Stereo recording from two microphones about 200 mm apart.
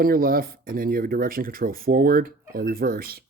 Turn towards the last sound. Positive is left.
turn(degrees=-50)  # may be behind; listen again after turning